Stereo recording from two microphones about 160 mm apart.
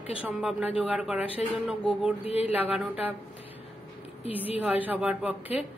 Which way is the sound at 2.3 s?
40° left (ahead or behind).